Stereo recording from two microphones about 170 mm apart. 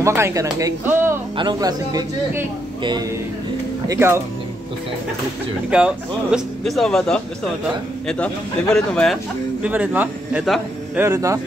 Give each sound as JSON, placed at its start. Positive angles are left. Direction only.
{"t": 0.0, "sound": "a man's voice", "side_deg": -15}
{"t": 5.7, "sound": "a man's voice", "side_deg": -5}
{"t": 11.0, "sound": "speech", "side_deg": -15}